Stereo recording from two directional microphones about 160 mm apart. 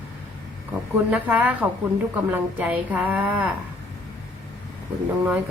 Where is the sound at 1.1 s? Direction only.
10° right (ahead or behind).